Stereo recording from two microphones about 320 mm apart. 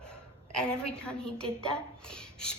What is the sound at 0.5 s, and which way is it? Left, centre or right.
A woman's voice, centre.